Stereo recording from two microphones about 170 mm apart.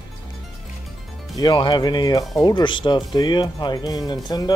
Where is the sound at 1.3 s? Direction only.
25° left (ahead or behind).